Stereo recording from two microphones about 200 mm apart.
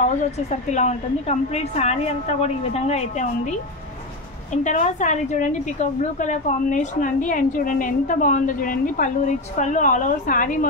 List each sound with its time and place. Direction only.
0.0 s a woman's voice: 35° left (ahead or behind)
4.6 s a woman's voice: 40° left (ahead or behind)